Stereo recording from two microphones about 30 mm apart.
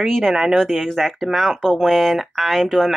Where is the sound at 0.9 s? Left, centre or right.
Centre.